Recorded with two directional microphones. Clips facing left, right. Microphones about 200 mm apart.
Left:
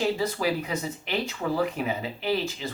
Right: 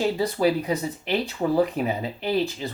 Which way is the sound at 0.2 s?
35° right (ahead or behind).